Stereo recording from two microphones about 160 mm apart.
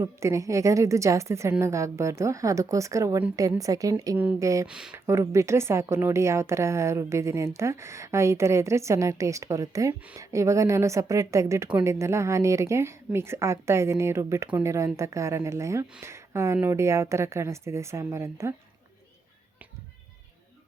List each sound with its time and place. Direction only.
0.0 s a woman's voice: 20° right (ahead or behind)